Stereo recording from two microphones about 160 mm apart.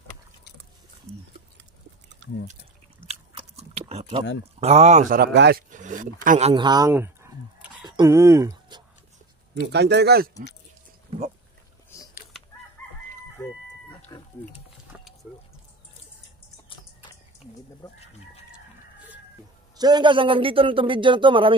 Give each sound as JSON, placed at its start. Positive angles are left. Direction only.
{"t": 1.1, "sound": "a sound", "side_deg": -40}
{"t": 3.1, "sound": "biting", "side_deg": -40}
{"t": 4.6, "sound": "speech", "side_deg": -40}
{"t": 5.1, "sound": "speech", "side_deg": -80}
{"t": 5.7, "sound": "speech", "side_deg": -55}
{"t": 6.5, "sound": "speech", "side_deg": -25}
{"t": 6.9, "sound": "a sound", "side_deg": -15}
{"t": 7.8, "sound": "a sound", "side_deg": -25}
{"t": 9.6, "sound": "speech", "side_deg": -90}
{"t": 11.9, "sound": "a sound", "side_deg": 20}
{"t": 12.8, "sound": "chicken", "side_deg": 15}
{"t": 14.9, "sound": "vehicle", "side_deg": -5}
{"t": 16.6, "sound": "typing", "side_deg": 30}
{"t": 19.8, "sound": "speech", "side_deg": -25}